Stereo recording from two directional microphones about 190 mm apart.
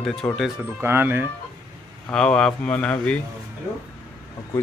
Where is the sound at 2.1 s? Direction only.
5° left (ahead or behind).